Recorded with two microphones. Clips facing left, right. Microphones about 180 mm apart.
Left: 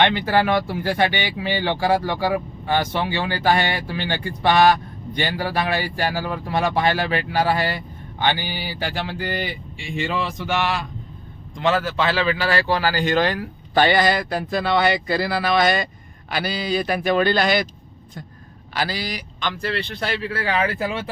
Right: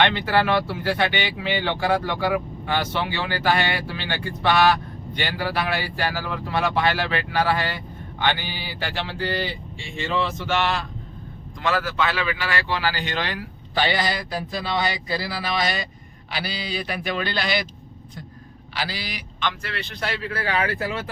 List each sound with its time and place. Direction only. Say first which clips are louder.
0.0 s speech: left 2 dB; 15° left (ahead or behind)
11.6 s speech: left 3 dB; 25° left (ahead or behind); by 17.7 s 45° left (ahead or behind)
18.7 s a man's voice: left 5 dB; 45° left (ahead or behind); by 21.0 s 30° left (ahead or behind)